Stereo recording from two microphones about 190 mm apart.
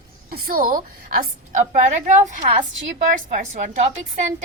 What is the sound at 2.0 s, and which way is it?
A woman's voice, 40° right (ahead or behind).